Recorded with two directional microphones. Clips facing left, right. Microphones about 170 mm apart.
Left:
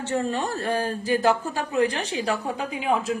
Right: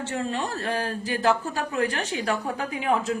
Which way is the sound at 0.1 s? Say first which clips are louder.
Left 5 dB; 40° left (ahead or behind).